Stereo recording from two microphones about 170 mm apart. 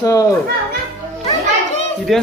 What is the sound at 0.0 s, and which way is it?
Speech, 20° left (ahead or behind).